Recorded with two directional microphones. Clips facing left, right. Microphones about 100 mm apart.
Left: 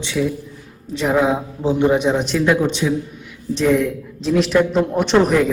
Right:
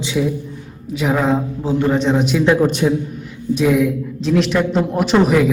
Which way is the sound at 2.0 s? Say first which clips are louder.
Right 2 dB; centre (ahead or behind).